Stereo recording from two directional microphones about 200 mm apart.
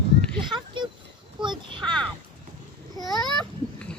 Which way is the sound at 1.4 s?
25° right (ahead or behind).